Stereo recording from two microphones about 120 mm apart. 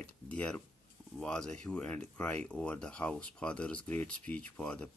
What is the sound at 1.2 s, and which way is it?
Speech, 5° left (ahead or behind).